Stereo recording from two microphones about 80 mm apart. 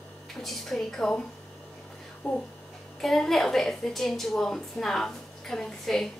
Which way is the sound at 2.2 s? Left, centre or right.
Centre.